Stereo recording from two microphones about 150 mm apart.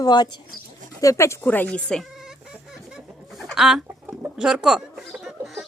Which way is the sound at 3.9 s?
15° right (ahead or behind).